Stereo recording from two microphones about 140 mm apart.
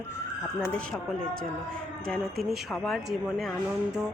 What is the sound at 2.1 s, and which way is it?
A woman's voice, 5° left (ahead or behind).